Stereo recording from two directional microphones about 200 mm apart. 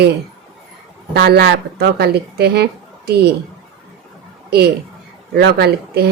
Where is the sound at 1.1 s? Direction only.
50° right (ahead or behind).